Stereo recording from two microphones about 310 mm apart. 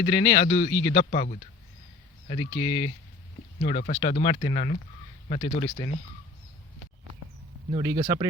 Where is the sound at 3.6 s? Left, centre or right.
Left.